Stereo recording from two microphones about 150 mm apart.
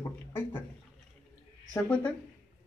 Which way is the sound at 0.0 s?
15° left (ahead or behind).